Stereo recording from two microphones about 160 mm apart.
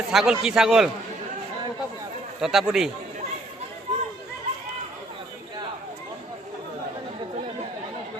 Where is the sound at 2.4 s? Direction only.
5° right (ahead or behind).